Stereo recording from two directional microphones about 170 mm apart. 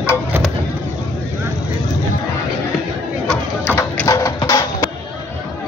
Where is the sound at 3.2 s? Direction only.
5° left (ahead or behind).